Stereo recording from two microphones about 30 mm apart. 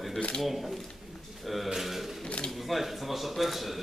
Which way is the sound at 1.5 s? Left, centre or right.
Centre.